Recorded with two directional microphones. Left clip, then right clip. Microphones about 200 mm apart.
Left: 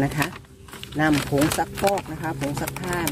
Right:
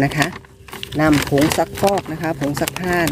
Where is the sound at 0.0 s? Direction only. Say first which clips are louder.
Right 6 dB; 30° right (ahead or behind).